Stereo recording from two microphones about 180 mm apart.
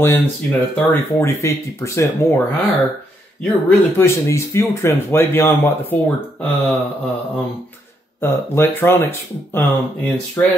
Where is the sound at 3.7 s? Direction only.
15° left (ahead or behind).